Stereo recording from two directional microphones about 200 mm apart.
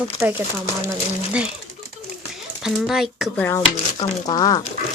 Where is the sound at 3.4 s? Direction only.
15° left (ahead or behind).